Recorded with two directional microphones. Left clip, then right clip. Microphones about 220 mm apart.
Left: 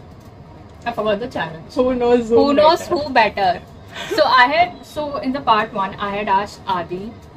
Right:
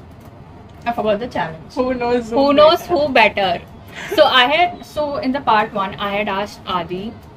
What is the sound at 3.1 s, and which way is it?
A woman's voice, 15° right (ahead or behind).